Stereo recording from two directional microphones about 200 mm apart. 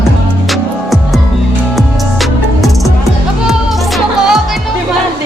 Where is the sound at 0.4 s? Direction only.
Centre (ahead or behind).